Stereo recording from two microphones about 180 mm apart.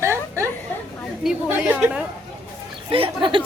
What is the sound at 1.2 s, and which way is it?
Speech, 5° right (ahead or behind).